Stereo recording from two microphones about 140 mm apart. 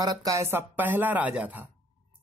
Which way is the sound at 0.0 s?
25° right (ahead or behind).